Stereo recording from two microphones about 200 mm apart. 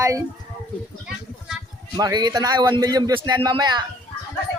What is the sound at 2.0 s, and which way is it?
Speech, 20° right (ahead or behind).